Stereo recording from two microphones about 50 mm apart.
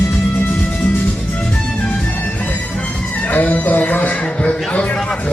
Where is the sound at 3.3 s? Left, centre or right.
Left.